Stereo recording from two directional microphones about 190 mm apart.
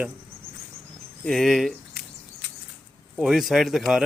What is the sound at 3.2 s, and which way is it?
Speech, centre (ahead or behind).